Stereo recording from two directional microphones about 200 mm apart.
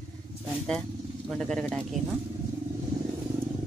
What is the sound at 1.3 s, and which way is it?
Speech, 5° left (ahead or behind).